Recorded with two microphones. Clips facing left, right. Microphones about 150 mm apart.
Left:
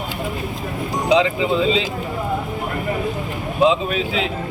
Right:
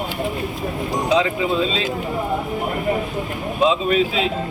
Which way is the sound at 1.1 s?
15° left (ahead or behind).